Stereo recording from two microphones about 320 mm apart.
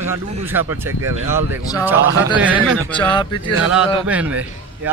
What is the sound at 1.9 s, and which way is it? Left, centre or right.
Speech, right.